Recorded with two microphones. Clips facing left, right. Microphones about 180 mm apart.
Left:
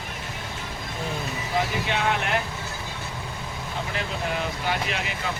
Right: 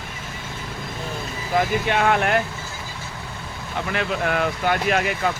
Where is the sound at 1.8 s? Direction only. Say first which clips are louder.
Right 6 dB; 55° right (ahead or behind).